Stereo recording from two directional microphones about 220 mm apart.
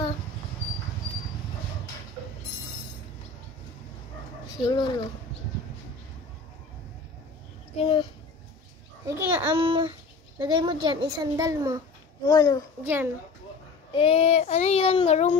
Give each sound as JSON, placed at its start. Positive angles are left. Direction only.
{"t": 4.6, "sound": "child singing", "side_deg": 20}
{"t": 7.8, "sound": "child singing", "side_deg": 20}
{"t": 9.0, "sound": "a child's voice", "side_deg": -10}
{"t": 9.6, "sound": "a child's voice", "side_deg": -25}
{"t": 12.3, "sound": "speech", "side_deg": 15}
{"t": 12.8, "sound": "a child's voice", "side_deg": -10}
{"t": 13.9, "sound": "child singing", "side_deg": 25}